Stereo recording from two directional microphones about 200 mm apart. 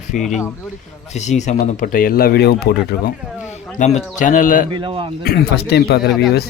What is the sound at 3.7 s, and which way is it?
Speech, 35° left (ahead or behind).